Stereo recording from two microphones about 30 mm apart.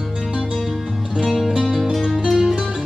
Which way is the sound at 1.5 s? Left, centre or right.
Centre.